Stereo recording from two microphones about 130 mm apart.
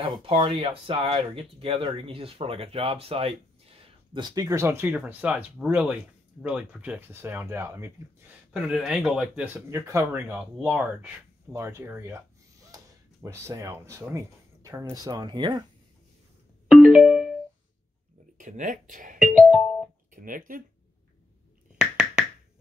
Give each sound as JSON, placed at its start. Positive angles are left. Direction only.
{"t": 0.0, "sound": "speech", "side_deg": -40}
{"t": 4.2, "sound": "speech", "side_deg": -30}
{"t": 8.5, "sound": "speech", "side_deg": -5}
{"t": 10.6, "sound": "speech", "side_deg": -10}
{"t": 16.6, "sound": "music", "side_deg": -5}
{"t": 18.4, "sound": "speech", "side_deg": -90}
{"t": 19.1, "sound": "speech", "side_deg": -5}
{"t": 20.1, "sound": "speech", "side_deg": -90}
{"t": 21.7, "sound": "a sound", "side_deg": -5}